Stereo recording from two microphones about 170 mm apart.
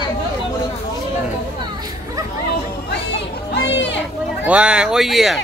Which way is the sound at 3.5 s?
90° left.